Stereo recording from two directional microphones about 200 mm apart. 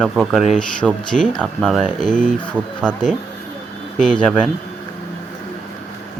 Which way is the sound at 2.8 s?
5° left (ahead or behind).